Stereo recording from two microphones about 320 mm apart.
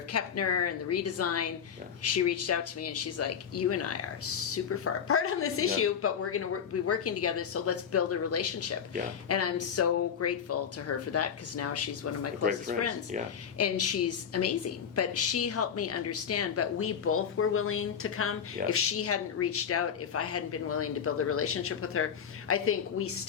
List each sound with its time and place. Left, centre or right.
0.1 s a woman's voice: left
12.7 s speech: right
13.6 s a woman's voice: left